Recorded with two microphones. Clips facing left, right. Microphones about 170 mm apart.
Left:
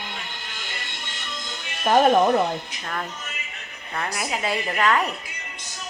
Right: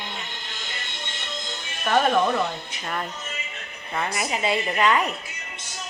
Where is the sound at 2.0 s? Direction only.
45° left (ahead or behind).